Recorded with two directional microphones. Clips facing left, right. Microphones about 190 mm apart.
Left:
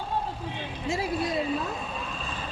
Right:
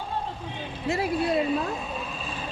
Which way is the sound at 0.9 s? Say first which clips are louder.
Right 3 dB; 60° right (ahead or behind).